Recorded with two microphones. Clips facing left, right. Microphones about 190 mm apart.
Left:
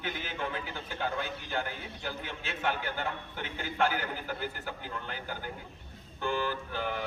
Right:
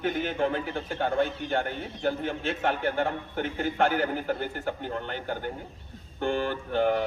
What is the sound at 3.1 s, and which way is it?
A man's voice, 45° right (ahead or behind).